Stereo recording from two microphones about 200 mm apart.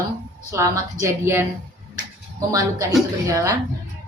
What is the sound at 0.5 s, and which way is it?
Speech, 15° right (ahead or behind).